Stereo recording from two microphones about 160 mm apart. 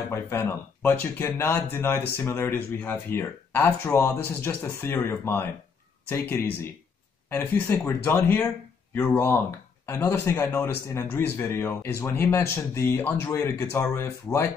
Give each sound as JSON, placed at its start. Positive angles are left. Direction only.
{"t": 0.1, "sound": "a man's voice", "side_deg": 15}